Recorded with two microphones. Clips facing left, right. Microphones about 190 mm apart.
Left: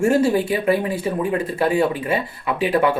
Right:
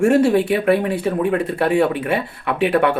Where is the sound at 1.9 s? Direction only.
65° right (ahead or behind).